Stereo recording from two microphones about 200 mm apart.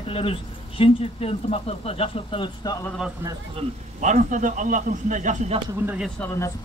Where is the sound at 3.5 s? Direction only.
40° right (ahead or behind).